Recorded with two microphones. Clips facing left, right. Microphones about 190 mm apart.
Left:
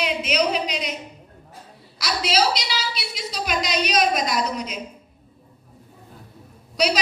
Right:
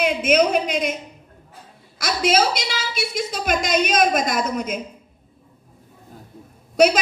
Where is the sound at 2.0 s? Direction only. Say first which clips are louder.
Right 3 dB; 50° right (ahead or behind).